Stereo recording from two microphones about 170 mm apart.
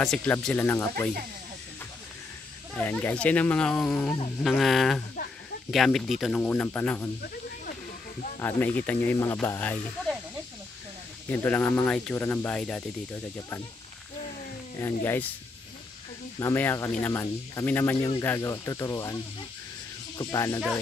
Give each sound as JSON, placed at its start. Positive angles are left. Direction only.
{"t": 0.0, "sound": "speech", "side_deg": 5}
{"t": 2.7, "sound": "speech", "side_deg": 10}
{"t": 8.4, "sound": "speech", "side_deg": 10}
{"t": 11.2, "sound": "speech", "side_deg": 10}
{"t": 16.3, "sound": "speech", "side_deg": 15}
{"t": 17.9, "sound": "speech", "side_deg": 30}
{"t": 18.2, "sound": "speech", "side_deg": 15}